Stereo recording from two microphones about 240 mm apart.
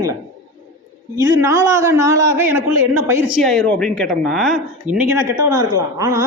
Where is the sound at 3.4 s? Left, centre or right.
Centre.